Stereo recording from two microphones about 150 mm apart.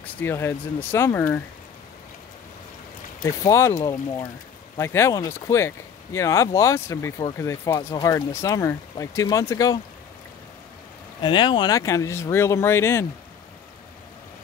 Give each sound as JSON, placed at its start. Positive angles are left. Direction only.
{"t": 0.0, "sound": "speech", "side_deg": 15}
{"t": 3.2, "sound": "speech", "side_deg": 25}
{"t": 11.2, "sound": "speech", "side_deg": 30}